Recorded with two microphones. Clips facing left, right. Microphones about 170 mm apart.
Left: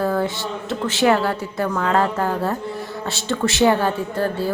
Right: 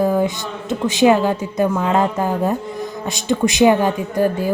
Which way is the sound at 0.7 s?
15° right (ahead or behind).